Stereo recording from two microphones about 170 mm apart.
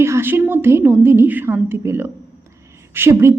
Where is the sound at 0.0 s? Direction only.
15° right (ahead or behind).